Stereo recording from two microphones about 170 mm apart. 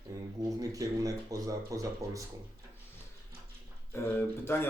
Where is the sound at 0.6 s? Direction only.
20° right (ahead or behind).